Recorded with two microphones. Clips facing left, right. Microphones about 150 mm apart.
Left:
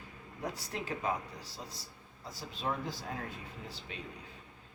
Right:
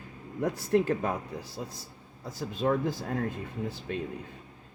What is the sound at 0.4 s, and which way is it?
Speech, 55° right (ahead or behind).